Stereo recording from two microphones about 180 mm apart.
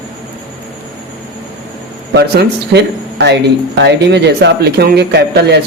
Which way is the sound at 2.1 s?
65° right (ahead or behind).